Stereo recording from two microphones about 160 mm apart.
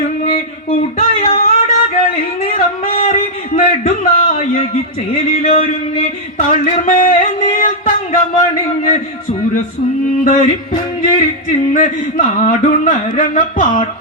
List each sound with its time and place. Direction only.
0.9 s a sound: 40° left (ahead or behind)
5.1 s a man's voice: 45° left (ahead or behind)
6.8 s music: 60° left (ahead or behind)
7.6 s a sound: 55° left (ahead or behind)
10.2 s music: 55° left (ahead or behind)
11.7 s a man's voice: 50° left (ahead or behind)